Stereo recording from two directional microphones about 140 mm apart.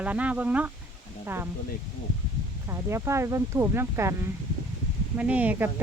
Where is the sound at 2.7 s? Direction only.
20° right (ahead or behind).